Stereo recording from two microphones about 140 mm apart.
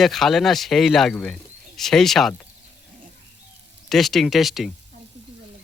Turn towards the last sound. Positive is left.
turn(degrees=0)  # may be behind; listen again after turning